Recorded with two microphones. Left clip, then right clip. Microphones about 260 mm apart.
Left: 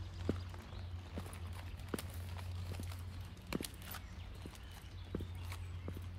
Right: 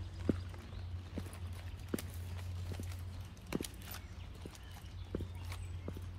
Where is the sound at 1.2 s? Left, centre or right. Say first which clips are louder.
Right 2 dB; left.